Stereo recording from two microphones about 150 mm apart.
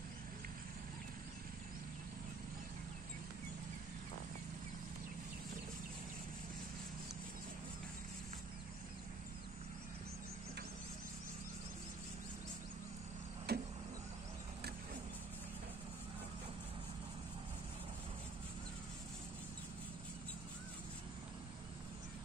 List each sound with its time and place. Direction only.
13.5 s vehicle: 90° right